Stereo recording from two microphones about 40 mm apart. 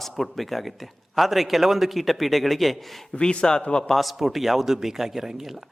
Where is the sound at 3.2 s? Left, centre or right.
Left.